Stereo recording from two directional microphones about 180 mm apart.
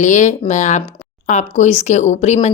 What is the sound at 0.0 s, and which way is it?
A woman's voice, 45° left (ahead or behind).